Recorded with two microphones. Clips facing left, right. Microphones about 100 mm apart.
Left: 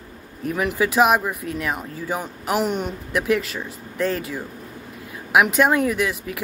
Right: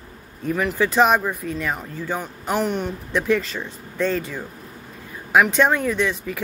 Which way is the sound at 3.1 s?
5° left (ahead or behind).